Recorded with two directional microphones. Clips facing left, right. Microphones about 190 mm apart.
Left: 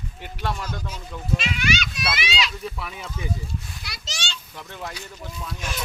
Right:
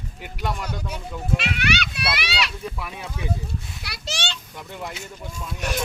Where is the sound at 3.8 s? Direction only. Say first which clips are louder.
Right 6 dB; 60° right (ahead or behind).